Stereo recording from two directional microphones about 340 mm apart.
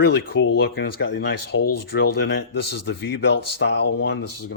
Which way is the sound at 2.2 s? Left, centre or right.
Left.